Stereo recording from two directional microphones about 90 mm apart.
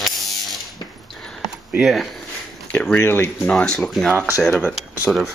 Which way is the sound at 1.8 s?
Centre (ahead or behind).